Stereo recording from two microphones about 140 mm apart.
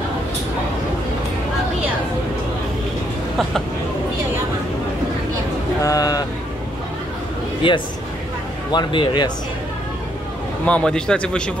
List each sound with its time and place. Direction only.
5.8 s a sound: 25° left (ahead or behind)
7.6 s speech: 35° left (ahead or behind)
10.6 s a man's voice: 10° left (ahead or behind)